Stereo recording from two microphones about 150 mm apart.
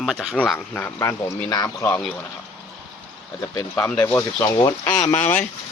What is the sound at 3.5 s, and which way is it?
Speech, 15° left (ahead or behind).